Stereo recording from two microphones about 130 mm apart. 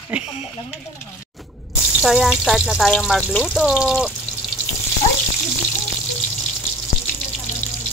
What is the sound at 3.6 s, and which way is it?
Speech, 5° right (ahead or behind).